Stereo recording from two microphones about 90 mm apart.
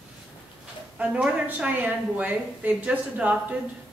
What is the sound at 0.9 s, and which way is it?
A woman's voice, 15° right (ahead or behind).